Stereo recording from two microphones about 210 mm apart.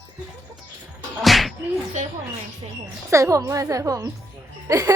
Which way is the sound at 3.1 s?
15° right (ahead or behind).